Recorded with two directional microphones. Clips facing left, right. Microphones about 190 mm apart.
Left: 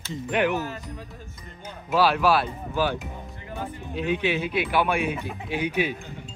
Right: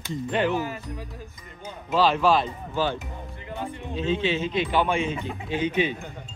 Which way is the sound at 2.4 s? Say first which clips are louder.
Left 1 dB; 10° left (ahead or behind).